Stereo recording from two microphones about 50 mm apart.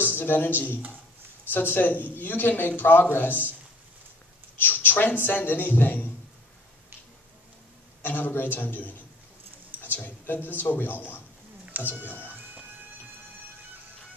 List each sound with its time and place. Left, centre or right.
0.0 s speech: left
4.6 s speech: left
8.0 s speech: left
10.0 s speech: left